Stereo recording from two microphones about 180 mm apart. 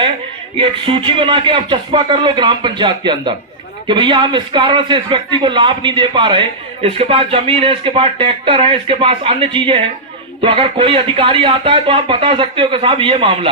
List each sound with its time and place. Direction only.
0.5 s a man's voice: 30° right (ahead or behind)